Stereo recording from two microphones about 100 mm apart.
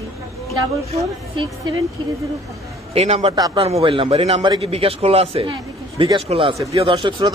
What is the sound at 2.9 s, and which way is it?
A man's voice, 85° right.